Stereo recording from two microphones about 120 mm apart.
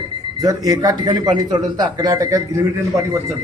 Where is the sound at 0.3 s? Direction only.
30° right (ahead or behind).